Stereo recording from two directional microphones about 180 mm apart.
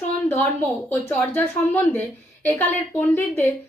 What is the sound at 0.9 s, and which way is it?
A woman's voice, 10° left (ahead or behind).